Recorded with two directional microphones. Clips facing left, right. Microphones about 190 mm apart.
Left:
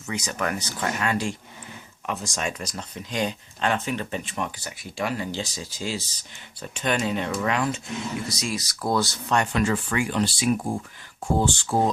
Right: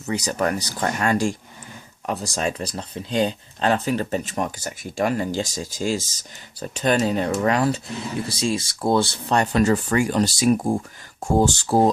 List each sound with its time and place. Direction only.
0.0 s speech: 35° right (ahead or behind)